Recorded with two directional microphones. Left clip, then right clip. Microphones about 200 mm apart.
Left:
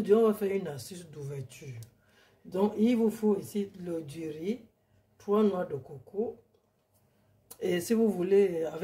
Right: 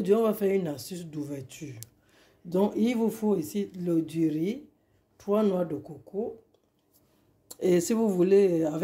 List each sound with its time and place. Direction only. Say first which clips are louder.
0.0 s speech: even; 45° right (ahead or behind)
7.5 s speech: right 4 dB; 35° right (ahead or behind)